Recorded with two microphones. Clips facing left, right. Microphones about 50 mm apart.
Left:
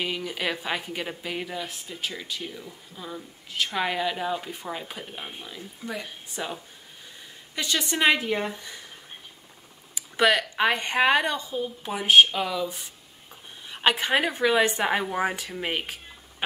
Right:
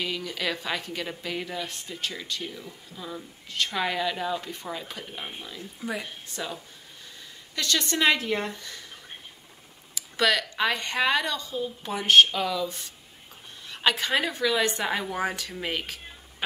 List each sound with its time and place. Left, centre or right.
0.0 s a woman's voice: centre
5.8 s speech: centre
6.2 s a woman's voice: centre
9.9 s a sound: left
10.5 s a woman's voice: left
11.8 s a woman's voice: centre